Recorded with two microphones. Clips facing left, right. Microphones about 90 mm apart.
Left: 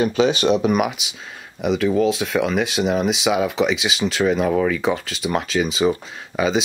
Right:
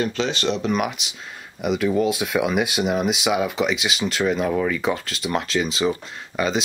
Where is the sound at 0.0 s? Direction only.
10° left (ahead or behind).